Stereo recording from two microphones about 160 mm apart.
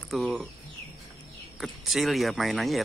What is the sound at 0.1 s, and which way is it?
Speech, centre (ahead or behind).